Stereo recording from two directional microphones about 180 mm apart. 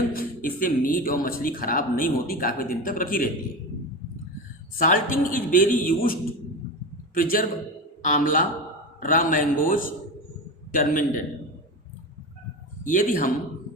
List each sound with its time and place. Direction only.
0.1 s a man's voice: 55° left (ahead or behind)
4.8 s a man's voice: 50° left (ahead or behind)
12.8 s a man's voice: 45° left (ahead or behind)